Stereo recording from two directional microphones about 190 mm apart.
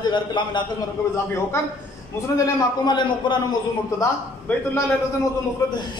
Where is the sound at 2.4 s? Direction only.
25° left (ahead or behind).